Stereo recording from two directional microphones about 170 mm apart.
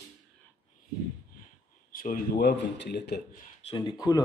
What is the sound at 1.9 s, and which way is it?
Speech, 55° left (ahead or behind).